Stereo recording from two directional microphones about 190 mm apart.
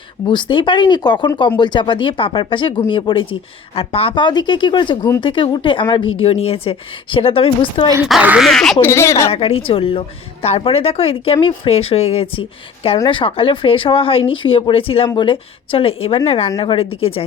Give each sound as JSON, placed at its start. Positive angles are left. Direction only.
{"t": 0.3, "sound": "speech", "side_deg": 25}
{"t": 8.0, "sound": "speech", "side_deg": -5}
{"t": 8.9, "sound": "speech", "side_deg": 15}
{"t": 9.3, "sound": "speech", "side_deg": 30}